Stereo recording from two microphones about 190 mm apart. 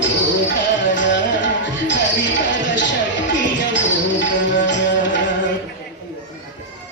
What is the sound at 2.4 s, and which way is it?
Basketball bounce, 70° left (ahead or behind).